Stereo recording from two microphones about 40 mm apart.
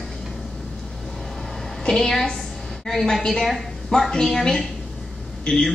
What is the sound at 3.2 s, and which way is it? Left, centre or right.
A woman's voice, centre.